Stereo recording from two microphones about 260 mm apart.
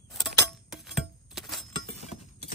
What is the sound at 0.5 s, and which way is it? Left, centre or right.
Chink, centre.